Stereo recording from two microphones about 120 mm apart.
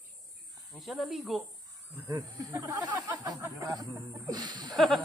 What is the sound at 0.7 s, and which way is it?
Speech, centre (ahead or behind).